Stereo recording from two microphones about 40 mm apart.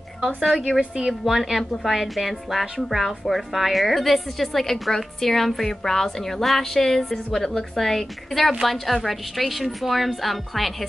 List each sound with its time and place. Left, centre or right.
0.7 s a woman's voice: centre
1.2 s a woman's voice: centre